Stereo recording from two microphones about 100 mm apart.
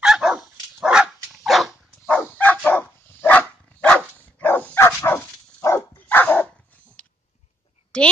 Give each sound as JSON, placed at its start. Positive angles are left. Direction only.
{"t": 0.0, "sound": "dog", "side_deg": -5}
{"t": 2.0, "sound": "dog", "side_deg": 15}
{"t": 7.9, "sound": "a sound", "side_deg": 10}